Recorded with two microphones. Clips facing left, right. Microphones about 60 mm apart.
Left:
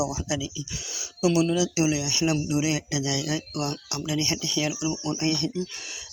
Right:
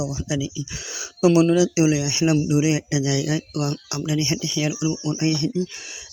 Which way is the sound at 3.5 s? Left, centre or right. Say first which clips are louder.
Right 4 dB; centre.